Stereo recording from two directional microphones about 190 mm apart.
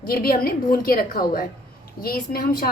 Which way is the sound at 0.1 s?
50° left (ahead or behind).